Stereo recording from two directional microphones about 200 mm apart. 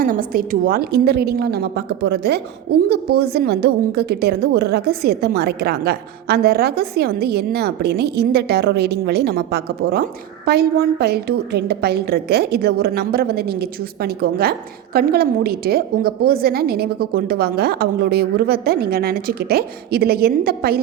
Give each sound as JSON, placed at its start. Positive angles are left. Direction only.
{"t": 0.0, "sound": "a woman's voice", "side_deg": -45}